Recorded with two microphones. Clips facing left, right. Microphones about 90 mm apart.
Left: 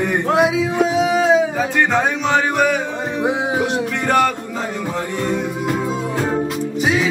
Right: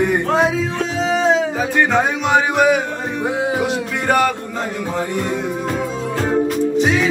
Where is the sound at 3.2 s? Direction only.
20° left (ahead or behind).